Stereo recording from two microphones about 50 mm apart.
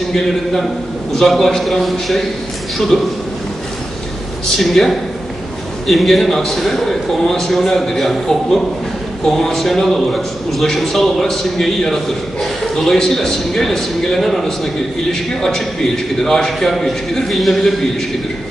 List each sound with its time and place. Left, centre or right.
0.1 s a man's voice: centre
2.9 s a man's voice: centre
4.5 s a man's voice: centre
16.2 s a man's voice: centre